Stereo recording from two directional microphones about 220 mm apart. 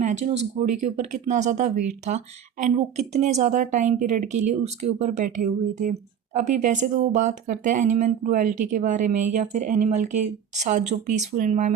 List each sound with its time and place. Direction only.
0.0 s speech: 30° right (ahead or behind)